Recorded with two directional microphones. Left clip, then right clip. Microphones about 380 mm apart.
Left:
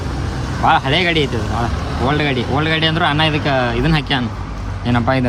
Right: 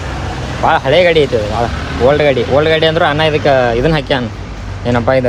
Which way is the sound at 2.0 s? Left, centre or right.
Centre.